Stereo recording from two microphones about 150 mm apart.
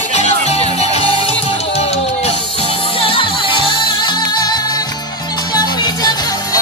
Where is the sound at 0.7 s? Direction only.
45° left (ahead or behind).